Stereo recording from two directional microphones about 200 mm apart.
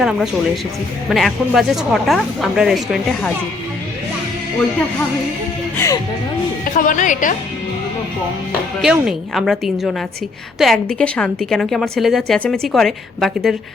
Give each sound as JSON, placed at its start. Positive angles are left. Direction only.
{"t": 0.0, "sound": "a woman's voice", "side_deg": 0}
{"t": 5.7, "sound": "speech", "side_deg": 15}
{"t": 6.7, "sound": "a woman's voice", "side_deg": 40}
{"t": 8.8, "sound": "a woman's voice", "side_deg": -5}